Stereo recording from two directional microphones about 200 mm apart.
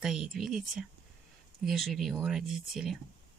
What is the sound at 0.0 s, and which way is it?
Speech, centre (ahead or behind).